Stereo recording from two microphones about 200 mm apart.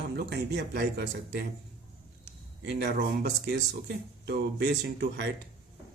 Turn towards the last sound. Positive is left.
turn(degrees=-60)  # may be behind; listen again after turning